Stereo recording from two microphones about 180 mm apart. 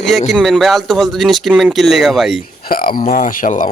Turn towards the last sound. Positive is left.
turn(degrees=45)  # may be behind; listen again after turning